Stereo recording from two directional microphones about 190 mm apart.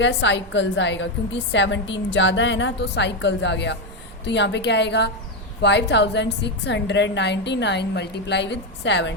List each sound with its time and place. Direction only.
0.0 s a woman's voice: 75° left (ahead or behind)